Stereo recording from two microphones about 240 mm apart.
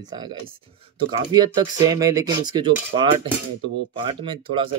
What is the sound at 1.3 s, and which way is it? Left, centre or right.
Speech, centre.